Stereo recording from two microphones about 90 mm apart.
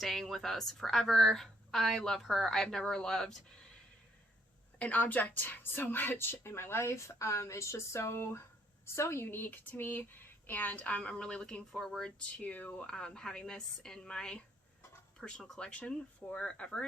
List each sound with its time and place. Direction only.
0.0 s a woman's voice: centre (ahead or behind)
4.8 s speech: 20° left (ahead or behind)